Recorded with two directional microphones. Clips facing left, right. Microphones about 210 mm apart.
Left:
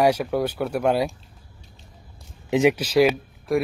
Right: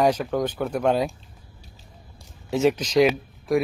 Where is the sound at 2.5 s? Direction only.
15° left (ahead or behind).